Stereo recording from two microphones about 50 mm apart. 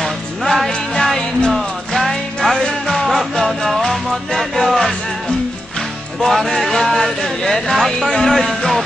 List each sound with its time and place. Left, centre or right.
0.0 s music: centre
3.1 s music: centre
6.2 s speech: centre